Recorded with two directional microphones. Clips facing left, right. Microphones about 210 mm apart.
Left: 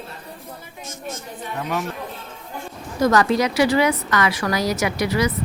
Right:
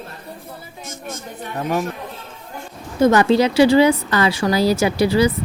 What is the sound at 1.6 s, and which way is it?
Speech, 45° right (ahead or behind).